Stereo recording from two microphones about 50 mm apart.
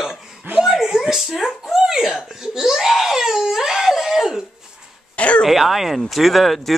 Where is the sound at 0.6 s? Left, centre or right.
Centre.